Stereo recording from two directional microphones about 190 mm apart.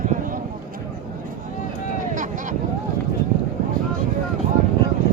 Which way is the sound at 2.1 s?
45° right (ahead or behind).